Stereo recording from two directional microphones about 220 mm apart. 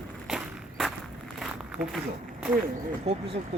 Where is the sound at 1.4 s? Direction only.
Centre (ahead or behind).